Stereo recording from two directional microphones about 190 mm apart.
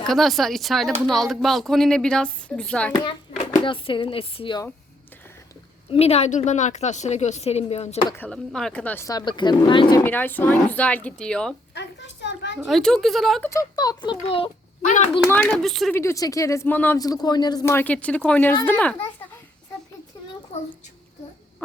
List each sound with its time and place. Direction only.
0.0 s speech: centre (ahead or behind)
3.0 s hands: 25° left (ahead or behind)
3.6 s speech: 25° left (ahead or behind)
5.9 s a woman's voice: 35° left (ahead or behind)
8.1 s speech: 5° left (ahead or behind); by 10.0 s 25° left (ahead or behind)
10.0 s speech: 10° left (ahead or behind)
11.7 s a sound: 65° left (ahead or behind)
12.6 s speech: centre (ahead or behind)
13.5 s speech: 20° left (ahead or behind)
15.3 s speech: 5° left (ahead or behind)
16.0 s speech: 15° left (ahead or behind)